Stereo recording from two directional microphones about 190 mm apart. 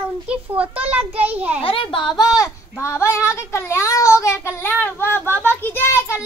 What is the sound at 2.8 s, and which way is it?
A child's voice, 15° left (ahead or behind).